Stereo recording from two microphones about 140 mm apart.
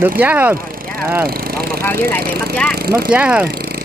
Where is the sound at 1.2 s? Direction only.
90° right.